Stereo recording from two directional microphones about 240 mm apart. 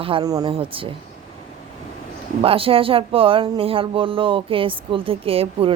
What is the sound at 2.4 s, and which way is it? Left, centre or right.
Speech, right.